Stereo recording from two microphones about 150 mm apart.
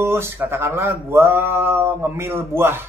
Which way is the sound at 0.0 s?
15° right (ahead or behind).